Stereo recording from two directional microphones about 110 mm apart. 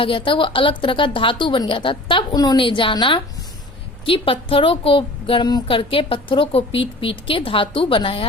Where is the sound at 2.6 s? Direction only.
50° left (ahead or behind).